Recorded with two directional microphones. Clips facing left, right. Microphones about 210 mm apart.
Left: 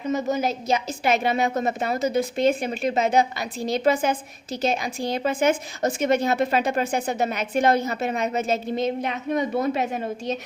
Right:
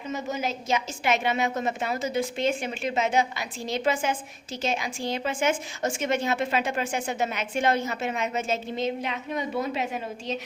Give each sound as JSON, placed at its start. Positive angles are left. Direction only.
{"t": 0.1, "sound": "a woman's voice", "side_deg": 40}